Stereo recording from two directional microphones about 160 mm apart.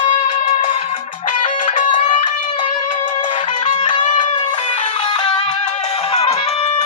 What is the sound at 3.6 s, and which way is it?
Music, 50° left (ahead or behind).